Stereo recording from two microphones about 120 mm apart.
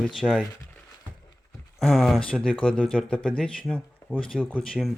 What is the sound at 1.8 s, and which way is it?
Speech, centre (ahead or behind).